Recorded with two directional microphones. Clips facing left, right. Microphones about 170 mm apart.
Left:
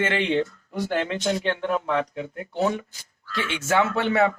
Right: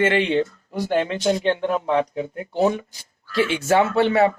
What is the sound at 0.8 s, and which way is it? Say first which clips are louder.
Speech: right 5 dB; 20° right (ahead or behind).